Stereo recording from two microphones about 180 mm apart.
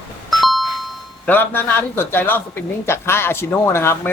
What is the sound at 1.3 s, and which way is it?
Speech, 10° left (ahead or behind).